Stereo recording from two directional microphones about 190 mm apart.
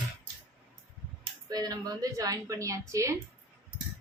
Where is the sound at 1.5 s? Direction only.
20° right (ahead or behind).